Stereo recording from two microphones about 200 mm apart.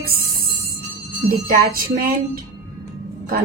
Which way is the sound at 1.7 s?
45° right (ahead or behind).